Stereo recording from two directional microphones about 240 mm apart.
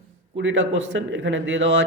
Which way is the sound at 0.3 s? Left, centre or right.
Right.